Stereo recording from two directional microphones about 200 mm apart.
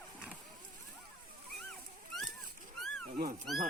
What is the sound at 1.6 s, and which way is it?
Wild animals, centre (ahead or behind).